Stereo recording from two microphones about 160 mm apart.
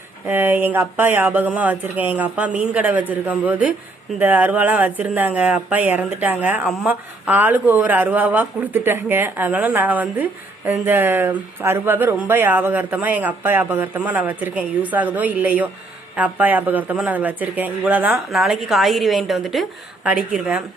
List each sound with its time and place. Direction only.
0.3 s speech: 10° right (ahead or behind)